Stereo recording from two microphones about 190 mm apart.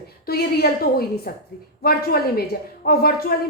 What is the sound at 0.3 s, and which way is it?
A woman's voice, 55° left (ahead or behind).